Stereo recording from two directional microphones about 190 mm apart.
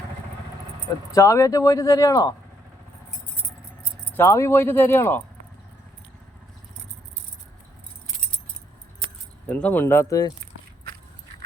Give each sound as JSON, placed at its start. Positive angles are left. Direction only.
{"t": 1.1, "sound": "speech", "side_deg": 15}
{"t": 4.1, "sound": "speech", "side_deg": 15}
{"t": 9.5, "sound": "speech", "side_deg": 10}